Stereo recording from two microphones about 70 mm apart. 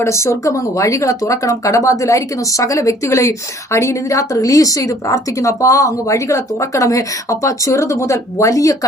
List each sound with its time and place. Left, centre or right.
0.0 s speech: left